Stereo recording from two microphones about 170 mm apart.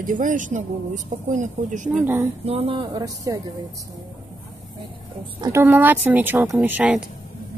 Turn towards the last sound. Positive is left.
turn(degrees=-10)  # may be behind; listen again after turning